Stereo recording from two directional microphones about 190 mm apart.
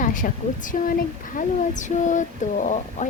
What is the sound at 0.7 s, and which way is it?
Speech, 40° left (ahead or behind).